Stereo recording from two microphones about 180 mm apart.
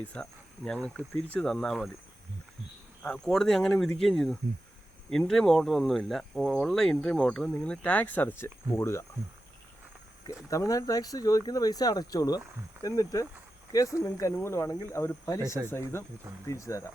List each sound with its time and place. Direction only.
0.0 s speech: 5° left (ahead or behind)
3.0 s speech: 5° left (ahead or behind)
10.5 s speech: 20° left (ahead or behind)